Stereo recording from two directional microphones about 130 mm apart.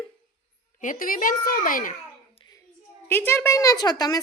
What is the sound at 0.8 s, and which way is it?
A child's voice, 90° left.